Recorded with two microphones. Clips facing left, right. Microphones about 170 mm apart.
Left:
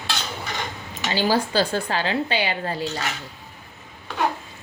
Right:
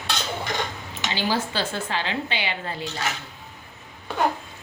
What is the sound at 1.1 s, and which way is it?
Speech, 40° left (ahead or behind).